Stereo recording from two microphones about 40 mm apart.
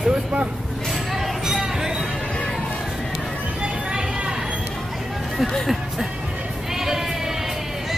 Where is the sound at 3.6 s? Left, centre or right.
Right.